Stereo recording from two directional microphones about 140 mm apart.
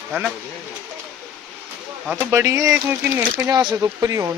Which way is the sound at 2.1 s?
20° right (ahead or behind).